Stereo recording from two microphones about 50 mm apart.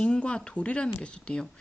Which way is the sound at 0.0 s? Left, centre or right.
Centre.